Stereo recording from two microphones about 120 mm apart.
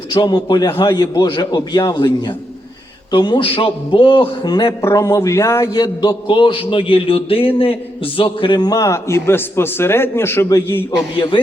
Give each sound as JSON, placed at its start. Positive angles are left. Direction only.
{"t": 0.1, "sound": "a man's voice", "side_deg": 35}
{"t": 4.8, "sound": "a man's voice", "side_deg": 25}